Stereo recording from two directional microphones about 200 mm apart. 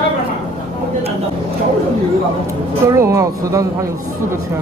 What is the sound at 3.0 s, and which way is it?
Speech, 15° right (ahead or behind).